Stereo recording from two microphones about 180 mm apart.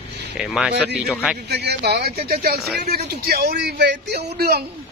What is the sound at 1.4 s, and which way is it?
A man's voice, 65° right (ahead or behind).